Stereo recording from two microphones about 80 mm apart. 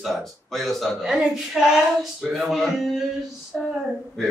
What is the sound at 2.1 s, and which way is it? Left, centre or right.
Speech, centre.